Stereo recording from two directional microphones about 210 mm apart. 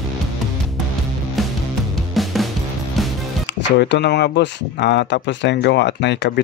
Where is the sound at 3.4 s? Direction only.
55° left (ahead or behind).